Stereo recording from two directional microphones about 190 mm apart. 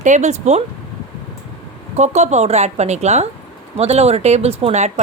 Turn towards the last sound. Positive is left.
turn(degrees=-35)  # may be behind; listen again after turning